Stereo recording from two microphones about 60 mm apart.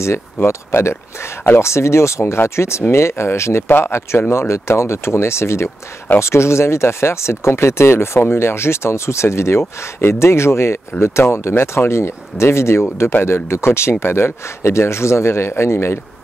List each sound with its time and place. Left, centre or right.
0.0 s speech: left